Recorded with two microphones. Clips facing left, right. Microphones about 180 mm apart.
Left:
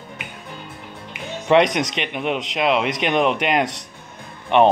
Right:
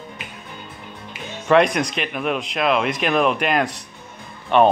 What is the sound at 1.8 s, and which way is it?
Speech, 90° left.